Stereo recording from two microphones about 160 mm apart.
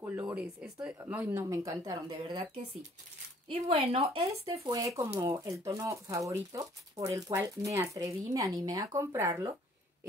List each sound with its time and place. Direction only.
0.0 s speech: 20° right (ahead or behind)
0.4 s speech: 5° right (ahead or behind); by 2.5 s 25° right (ahead or behind)
3.4 s speech: 35° right (ahead or behind)
4.0 s speech: 20° right (ahead or behind)